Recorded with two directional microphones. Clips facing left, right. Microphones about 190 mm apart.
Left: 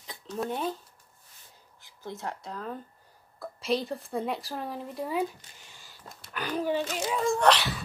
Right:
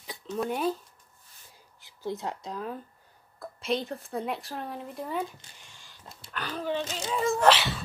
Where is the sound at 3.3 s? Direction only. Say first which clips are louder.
Left 1 dB; centre (ahead or behind).